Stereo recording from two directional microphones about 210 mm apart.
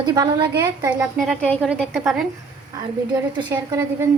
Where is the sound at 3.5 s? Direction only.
10° right (ahead or behind).